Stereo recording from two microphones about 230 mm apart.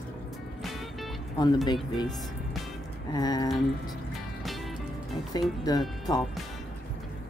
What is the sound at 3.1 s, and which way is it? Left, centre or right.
Speech, centre.